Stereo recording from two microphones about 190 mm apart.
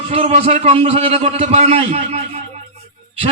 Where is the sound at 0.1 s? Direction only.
35° right (ahead or behind).